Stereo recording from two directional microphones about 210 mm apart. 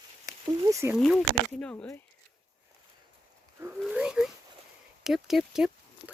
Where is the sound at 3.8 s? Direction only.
5° right (ahead or behind).